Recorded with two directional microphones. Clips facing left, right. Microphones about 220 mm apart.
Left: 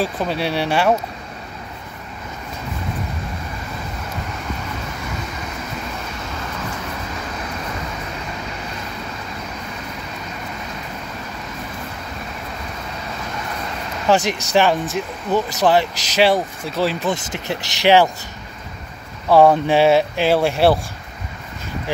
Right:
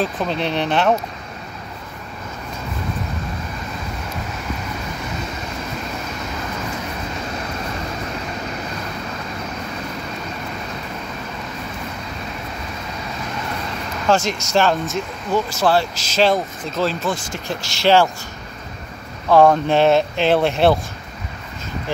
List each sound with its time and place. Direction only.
0.0 s speech: 10° left (ahead or behind)
14.0 s speech: 15° left (ahead or behind)
19.2 s speech: 10° left (ahead or behind)